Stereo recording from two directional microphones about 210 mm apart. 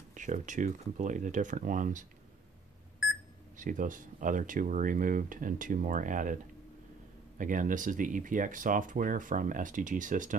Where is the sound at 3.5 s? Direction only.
40° right (ahead or behind).